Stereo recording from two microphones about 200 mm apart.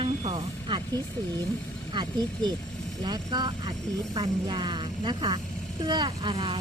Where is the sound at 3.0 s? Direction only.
20° right (ahead or behind).